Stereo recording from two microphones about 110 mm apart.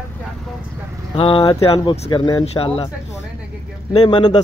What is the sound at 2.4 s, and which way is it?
Speech, 65° left (ahead or behind).